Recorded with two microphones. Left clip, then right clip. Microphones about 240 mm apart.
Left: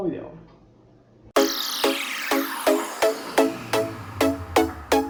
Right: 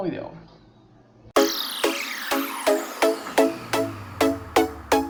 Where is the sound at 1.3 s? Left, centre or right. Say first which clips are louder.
Even; centre.